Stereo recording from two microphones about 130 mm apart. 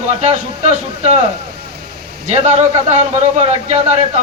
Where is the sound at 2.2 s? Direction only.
60° right (ahead or behind).